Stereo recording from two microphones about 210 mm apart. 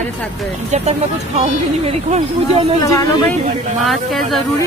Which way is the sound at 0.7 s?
35° right (ahead or behind).